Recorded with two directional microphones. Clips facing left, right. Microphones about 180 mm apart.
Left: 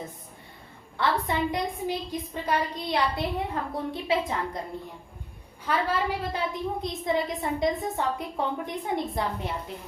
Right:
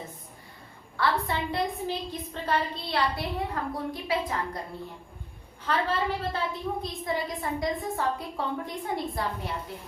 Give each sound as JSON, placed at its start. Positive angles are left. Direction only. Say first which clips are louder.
{"t": 1.3, "sound": "a woman's voice", "louder": "left 2 dB", "side_deg": 15}
{"t": 5.6, "sound": "a woman's voice", "louder": "left 1 dB", "side_deg": 10}